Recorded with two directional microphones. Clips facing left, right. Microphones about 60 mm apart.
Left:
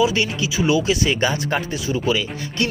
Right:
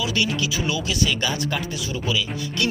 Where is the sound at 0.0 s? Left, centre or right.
Left.